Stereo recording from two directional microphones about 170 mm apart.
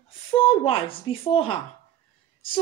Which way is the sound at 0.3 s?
30° left (ahead or behind).